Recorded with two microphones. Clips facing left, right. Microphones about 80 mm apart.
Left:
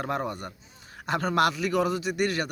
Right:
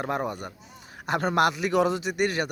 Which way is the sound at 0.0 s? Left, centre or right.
Centre.